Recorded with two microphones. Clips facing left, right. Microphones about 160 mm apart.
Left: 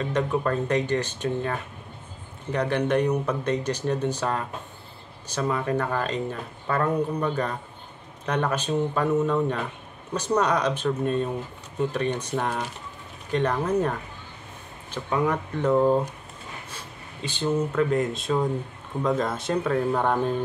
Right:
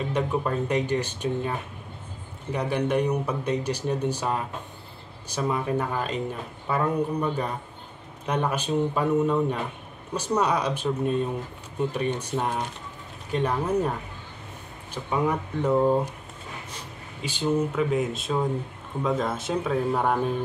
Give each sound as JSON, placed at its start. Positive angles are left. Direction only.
{"t": 0.0, "sound": "speech", "side_deg": -10}
{"t": 14.9, "sound": "speech", "side_deg": -10}